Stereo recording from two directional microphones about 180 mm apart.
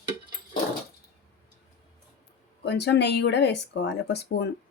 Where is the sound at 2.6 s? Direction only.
70° left (ahead or behind).